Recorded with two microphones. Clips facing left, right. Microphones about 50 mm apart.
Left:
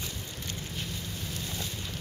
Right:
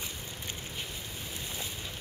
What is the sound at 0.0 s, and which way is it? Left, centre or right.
Boat, centre.